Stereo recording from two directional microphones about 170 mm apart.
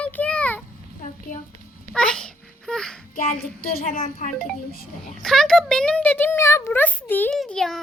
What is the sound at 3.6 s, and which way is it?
Speech, 60° left (ahead or behind).